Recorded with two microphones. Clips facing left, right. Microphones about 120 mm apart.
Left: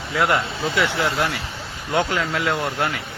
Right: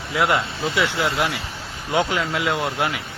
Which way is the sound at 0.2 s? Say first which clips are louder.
Even; centre (ahead or behind).